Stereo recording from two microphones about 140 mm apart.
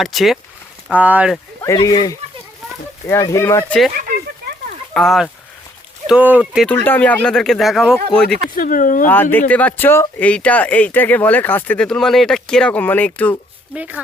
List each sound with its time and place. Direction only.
0.0 s speech: centre (ahead or behind)
0.9 s speech: 10° right (ahead or behind)
1.6 s speech: 25° left (ahead or behind)
3.7 s speech: centre (ahead or behind)
4.9 s speech: centre (ahead or behind)
6.1 s speech: 10° right (ahead or behind)
6.7 s speech: 10° left (ahead or behind)
8.5 s speech: 80° left
9.0 s speech: 15° left (ahead or behind)
13.7 s speech: 10° right (ahead or behind)